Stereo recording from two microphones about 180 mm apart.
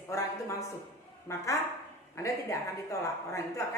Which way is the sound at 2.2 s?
15° left (ahead or behind).